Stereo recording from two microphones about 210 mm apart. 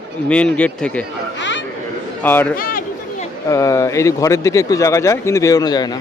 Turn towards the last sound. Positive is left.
turn(degrees=20)  # may be behind; listen again after turning